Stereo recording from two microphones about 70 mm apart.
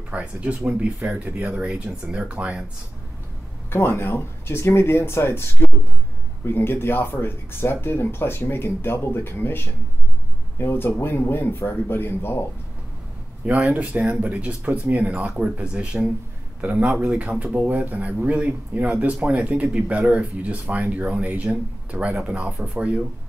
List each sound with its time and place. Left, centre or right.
0.1 s speech: centre
3.7 s speech: left
13.5 s speech: right